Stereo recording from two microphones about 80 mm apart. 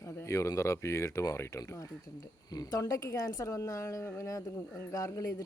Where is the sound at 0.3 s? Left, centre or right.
Left.